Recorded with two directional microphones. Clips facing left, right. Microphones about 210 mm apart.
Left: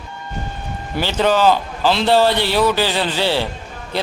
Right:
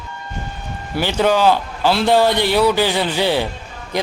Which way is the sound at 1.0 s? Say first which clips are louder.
Even; 10° right (ahead or behind).